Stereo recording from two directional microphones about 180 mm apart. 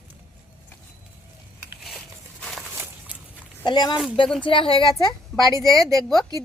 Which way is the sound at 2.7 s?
10° right (ahead or behind).